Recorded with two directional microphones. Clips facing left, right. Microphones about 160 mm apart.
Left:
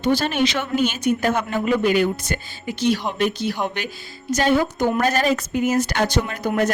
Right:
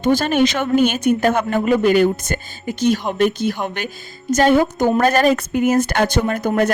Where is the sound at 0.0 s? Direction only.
45° right (ahead or behind).